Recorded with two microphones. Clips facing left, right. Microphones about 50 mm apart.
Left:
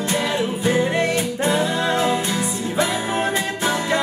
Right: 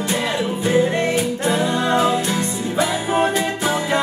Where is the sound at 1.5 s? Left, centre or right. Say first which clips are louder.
Right 4 dB; centre.